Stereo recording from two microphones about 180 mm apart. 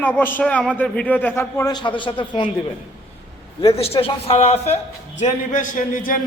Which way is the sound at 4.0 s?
30° left (ahead or behind).